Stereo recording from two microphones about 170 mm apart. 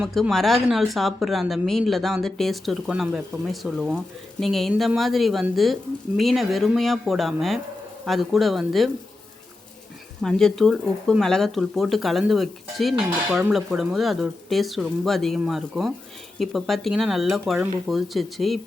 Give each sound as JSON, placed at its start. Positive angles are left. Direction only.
{"t": 0.0, "sound": "speech", "side_deg": 0}
{"t": 10.2, "sound": "speech", "side_deg": 5}